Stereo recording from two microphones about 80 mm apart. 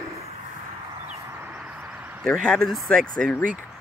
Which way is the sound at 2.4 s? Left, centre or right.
Centre.